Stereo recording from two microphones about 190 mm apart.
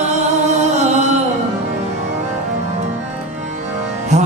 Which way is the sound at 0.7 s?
35° right (ahead or behind).